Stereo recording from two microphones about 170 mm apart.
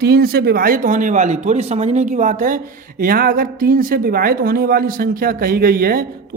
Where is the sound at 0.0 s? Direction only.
65° right (ahead or behind).